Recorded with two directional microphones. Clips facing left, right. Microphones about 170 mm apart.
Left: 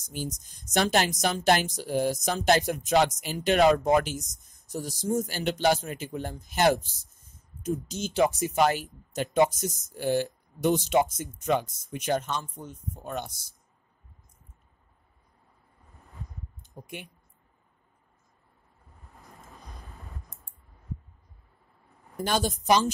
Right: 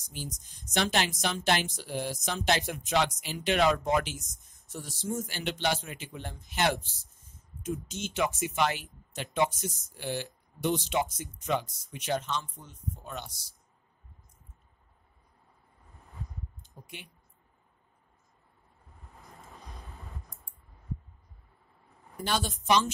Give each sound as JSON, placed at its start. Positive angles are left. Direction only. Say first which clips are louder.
{"t": 0.1, "sound": "speech", "louder": "left 6 dB", "side_deg": 45}
{"t": 16.8, "sound": "speech", "louder": "left 6 dB", "side_deg": 50}
{"t": 19.0, "sound": "vehicle", "louder": "even", "side_deg": 0}
{"t": 22.1, "sound": "speech", "louder": "left 4 dB", "side_deg": 45}